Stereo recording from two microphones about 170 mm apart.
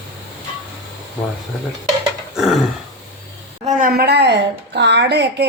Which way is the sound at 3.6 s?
60° right (ahead or behind).